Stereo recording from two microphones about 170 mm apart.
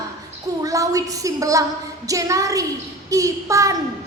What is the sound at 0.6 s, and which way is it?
A woman's voice, 20° right (ahead or behind).